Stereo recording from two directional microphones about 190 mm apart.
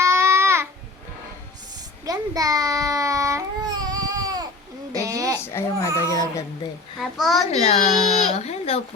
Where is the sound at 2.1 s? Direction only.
20° right (ahead or behind).